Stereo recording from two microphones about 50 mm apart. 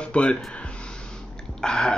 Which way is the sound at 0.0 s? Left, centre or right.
Left.